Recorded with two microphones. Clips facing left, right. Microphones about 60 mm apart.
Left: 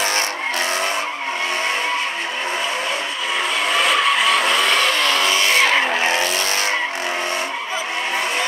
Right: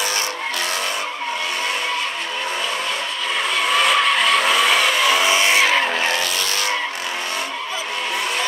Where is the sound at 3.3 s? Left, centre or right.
Centre.